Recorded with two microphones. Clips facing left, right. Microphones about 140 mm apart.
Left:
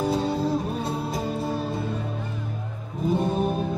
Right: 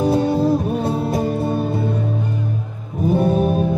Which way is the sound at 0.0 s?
55° right (ahead or behind).